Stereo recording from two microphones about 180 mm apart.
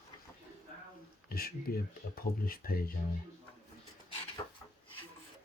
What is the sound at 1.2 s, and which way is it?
Speech, 55° left (ahead or behind).